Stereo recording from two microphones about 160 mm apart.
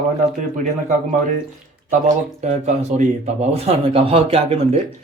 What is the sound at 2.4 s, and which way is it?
Speech, 45° right (ahead or behind).